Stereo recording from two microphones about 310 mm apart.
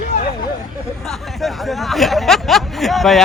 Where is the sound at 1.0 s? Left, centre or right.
Centre.